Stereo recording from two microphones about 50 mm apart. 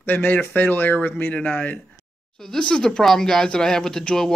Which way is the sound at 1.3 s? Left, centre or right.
Left.